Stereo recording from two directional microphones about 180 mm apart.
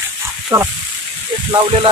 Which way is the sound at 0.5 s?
15° right (ahead or behind).